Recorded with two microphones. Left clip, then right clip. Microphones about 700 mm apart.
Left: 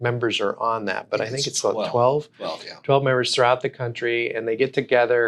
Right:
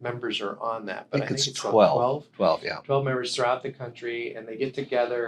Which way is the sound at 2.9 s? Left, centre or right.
Left.